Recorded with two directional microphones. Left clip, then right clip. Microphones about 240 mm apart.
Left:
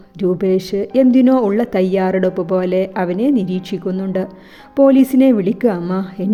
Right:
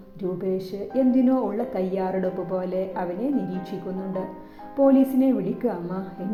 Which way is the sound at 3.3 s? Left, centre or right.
Left.